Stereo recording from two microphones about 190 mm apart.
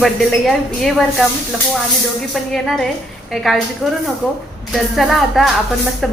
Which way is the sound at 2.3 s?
Centre (ahead or behind).